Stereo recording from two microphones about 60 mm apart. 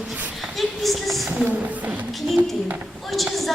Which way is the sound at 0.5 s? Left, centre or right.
Centre.